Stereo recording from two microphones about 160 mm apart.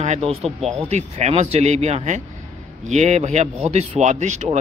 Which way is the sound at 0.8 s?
45° right (ahead or behind).